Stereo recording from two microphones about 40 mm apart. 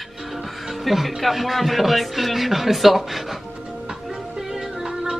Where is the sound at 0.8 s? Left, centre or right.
Centre.